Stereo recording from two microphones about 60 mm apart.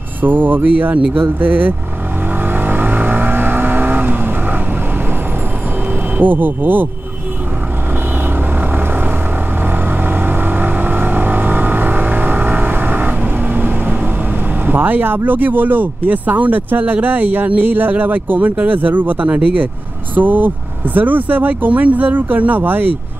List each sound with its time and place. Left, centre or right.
0.2 s speech: right
2.4 s vehicle: right
6.1 s speech: right
8.5 s vehicle: right
14.7 s speech: right